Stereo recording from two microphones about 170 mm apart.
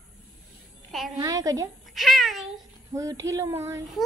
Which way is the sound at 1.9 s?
Centre (ahead or behind).